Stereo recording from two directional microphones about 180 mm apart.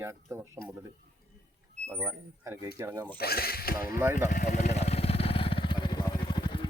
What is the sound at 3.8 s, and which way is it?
Speech, 15° right (ahead or behind).